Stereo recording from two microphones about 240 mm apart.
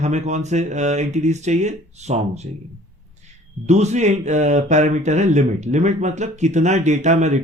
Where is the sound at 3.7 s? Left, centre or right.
Right.